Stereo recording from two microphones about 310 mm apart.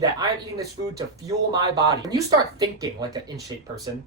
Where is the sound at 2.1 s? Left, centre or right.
Centre.